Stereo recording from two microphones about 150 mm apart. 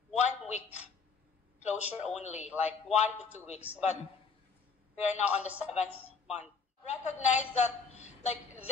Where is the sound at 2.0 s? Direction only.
50° left (ahead or behind).